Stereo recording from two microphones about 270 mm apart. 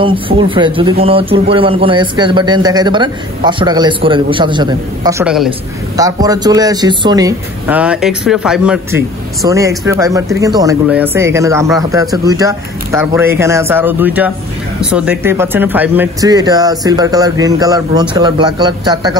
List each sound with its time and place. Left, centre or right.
0.0 s speech: centre
5.2 s a woman's voice: centre
5.9 s speech: centre